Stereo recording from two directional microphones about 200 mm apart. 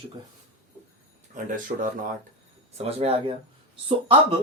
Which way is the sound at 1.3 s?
40° right (ahead or behind).